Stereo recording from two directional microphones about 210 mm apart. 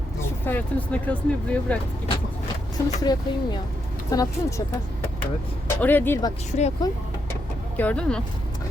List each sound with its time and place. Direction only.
0.4 s speech: 10° left (ahead or behind)
3.0 s speech: 20° left (ahead or behind)
5.6 s speech: 10° left (ahead or behind)
6.5 s speech: 30° left (ahead or behind)
7.8 s speech: 5° left (ahead or behind)